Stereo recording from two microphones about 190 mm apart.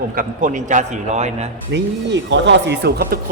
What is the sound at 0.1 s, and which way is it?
A man's voice, 45° right (ahead or behind).